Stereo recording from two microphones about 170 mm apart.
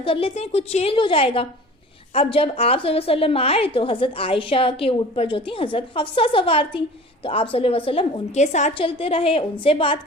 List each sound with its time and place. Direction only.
0.0 s a woman's voice: 35° left (ahead or behind)